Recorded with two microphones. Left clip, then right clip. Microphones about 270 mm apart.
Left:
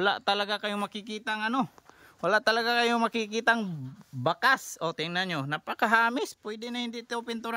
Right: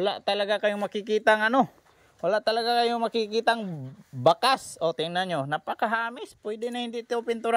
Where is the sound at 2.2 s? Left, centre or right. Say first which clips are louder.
Even; centre.